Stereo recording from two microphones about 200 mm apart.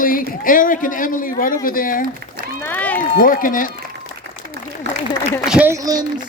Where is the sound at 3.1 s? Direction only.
45° left (ahead or behind).